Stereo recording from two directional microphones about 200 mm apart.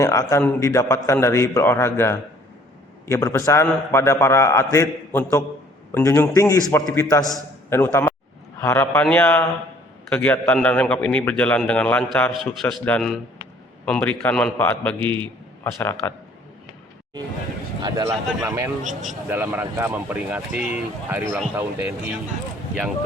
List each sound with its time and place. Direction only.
0.0 s a man's voice: 15° left (ahead or behind)
17.8 s speech: 15° right (ahead or behind)
18.8 s speech: 40° right (ahead or behind)
19.3 s speech: 10° right (ahead or behind)